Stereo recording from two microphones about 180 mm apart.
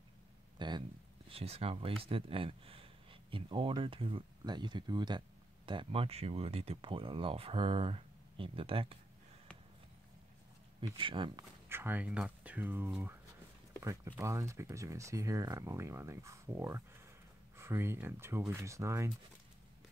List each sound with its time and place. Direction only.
0.6 s speech: 25° right (ahead or behind)
10.8 s speech: 25° right (ahead or behind)
11.7 s speech: 10° right (ahead or behind)